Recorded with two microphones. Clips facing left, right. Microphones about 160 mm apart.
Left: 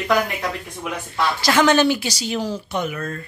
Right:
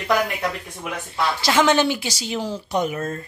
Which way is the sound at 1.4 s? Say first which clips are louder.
Left 2 dB; 20° right (ahead or behind).